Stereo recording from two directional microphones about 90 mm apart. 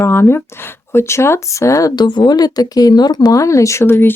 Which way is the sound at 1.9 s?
55° left (ahead or behind).